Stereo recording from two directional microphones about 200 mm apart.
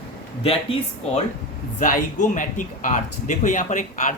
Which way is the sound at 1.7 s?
40° left (ahead or behind).